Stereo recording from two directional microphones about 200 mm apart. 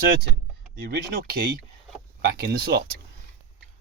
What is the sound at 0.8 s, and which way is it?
Speech, 50° right (ahead or behind).